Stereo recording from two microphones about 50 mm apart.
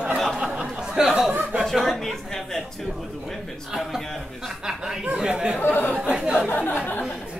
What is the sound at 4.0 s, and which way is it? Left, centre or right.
Speech, centre.